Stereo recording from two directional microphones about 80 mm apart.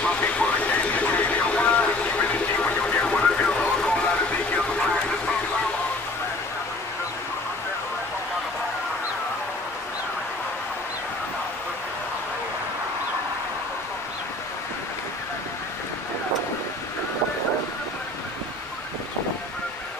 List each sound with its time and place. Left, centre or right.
0.0 s a sound: centre
2.6 s music: centre
4.6 s vehicle: centre